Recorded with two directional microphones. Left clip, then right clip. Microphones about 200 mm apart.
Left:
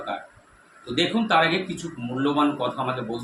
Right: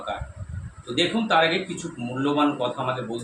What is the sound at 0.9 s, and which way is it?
Speech, 5° left (ahead or behind).